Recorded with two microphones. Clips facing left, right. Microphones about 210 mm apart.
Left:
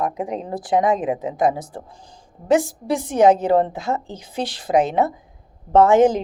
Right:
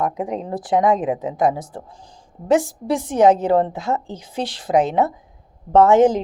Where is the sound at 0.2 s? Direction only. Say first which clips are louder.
Right 1 dB; 5° left (ahead or behind).